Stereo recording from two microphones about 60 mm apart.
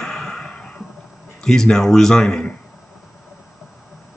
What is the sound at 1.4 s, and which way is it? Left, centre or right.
Speech, centre.